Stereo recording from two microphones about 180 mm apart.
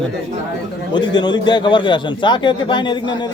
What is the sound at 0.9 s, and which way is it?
A man's voice, 25° left (ahead or behind).